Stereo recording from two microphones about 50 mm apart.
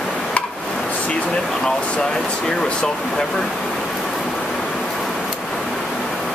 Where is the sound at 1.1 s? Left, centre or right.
Centre.